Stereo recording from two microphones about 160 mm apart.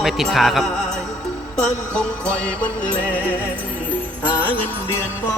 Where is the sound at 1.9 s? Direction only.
5° left (ahead or behind).